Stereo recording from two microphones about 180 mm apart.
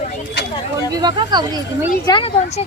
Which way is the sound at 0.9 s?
25° right (ahead or behind).